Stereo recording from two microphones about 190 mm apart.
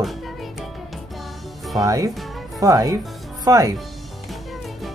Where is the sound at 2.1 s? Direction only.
Centre (ahead or behind).